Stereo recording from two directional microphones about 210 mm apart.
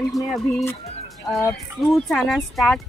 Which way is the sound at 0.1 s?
Centre (ahead or behind).